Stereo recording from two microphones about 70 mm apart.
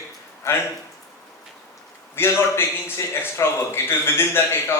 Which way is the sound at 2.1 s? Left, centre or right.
Left.